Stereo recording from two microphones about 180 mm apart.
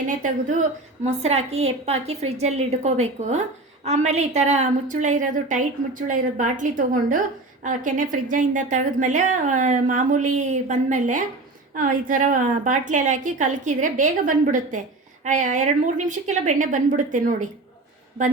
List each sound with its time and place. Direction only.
0.2 s a woman's voice: 45° right (ahead or behind)